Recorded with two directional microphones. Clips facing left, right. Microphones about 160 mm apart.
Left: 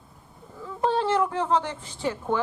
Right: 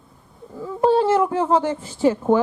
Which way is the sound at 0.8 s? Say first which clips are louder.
Right 7 dB; 10° right (ahead or behind).